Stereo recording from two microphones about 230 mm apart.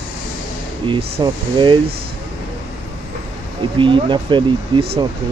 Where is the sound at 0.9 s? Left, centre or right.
Right.